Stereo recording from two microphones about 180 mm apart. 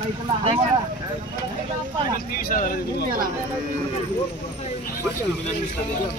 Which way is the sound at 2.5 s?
50° left (ahead or behind).